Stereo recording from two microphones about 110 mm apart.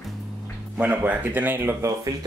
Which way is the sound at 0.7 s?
15° right (ahead or behind).